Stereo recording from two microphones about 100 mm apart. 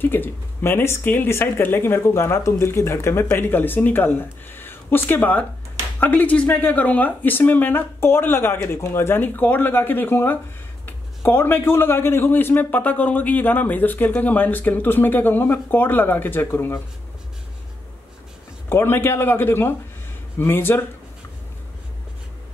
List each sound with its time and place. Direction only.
0.0 s speech: 20° left (ahead or behind)
18.7 s speech: 25° left (ahead or behind)